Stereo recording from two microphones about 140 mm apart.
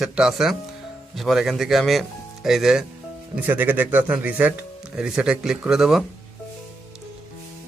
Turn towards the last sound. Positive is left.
turn(degrees=-5)  # may be behind; listen again after turning